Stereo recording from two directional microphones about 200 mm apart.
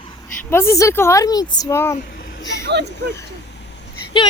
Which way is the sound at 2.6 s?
55° right (ahead or behind).